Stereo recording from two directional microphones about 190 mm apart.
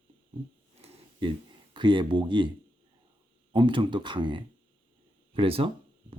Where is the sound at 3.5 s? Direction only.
25° right (ahead or behind).